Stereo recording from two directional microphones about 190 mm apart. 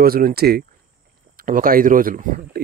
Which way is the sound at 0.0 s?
50° right (ahead or behind).